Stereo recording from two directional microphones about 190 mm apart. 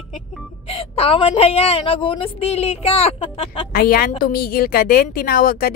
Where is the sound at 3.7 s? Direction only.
55° left (ahead or behind).